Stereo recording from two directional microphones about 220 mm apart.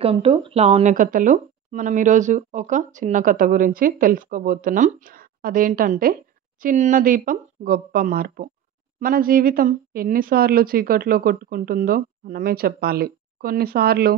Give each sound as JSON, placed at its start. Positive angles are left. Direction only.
{"t": 0.0, "sound": "a woman's voice", "side_deg": -25}